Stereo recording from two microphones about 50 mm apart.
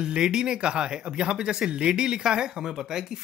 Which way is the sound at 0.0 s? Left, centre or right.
Centre.